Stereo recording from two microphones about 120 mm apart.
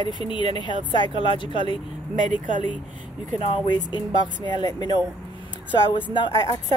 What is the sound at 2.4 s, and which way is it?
Speech, 90° right.